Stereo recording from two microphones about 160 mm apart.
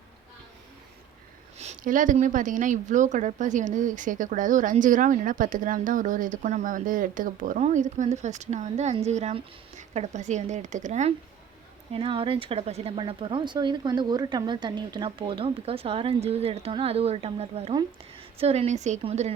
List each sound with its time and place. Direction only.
1.5 s speech: 50° right (ahead or behind)
11.9 s speech: 35° right (ahead or behind)